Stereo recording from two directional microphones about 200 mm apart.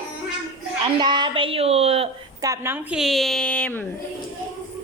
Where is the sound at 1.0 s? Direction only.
25° right (ahead or behind).